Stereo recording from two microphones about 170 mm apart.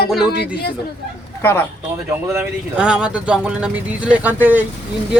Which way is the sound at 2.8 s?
5° right (ahead or behind).